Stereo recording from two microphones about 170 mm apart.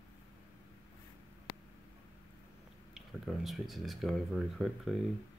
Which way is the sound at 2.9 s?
Centre (ahead or behind).